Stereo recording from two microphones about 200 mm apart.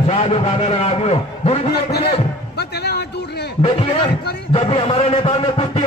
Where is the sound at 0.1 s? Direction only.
30° left (ahead or behind).